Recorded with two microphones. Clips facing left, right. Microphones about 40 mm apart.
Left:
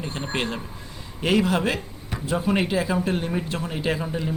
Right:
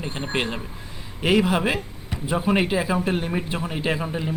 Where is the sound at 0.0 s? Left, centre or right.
Centre.